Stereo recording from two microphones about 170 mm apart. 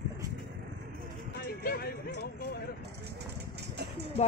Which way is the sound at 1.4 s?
65° left (ahead or behind).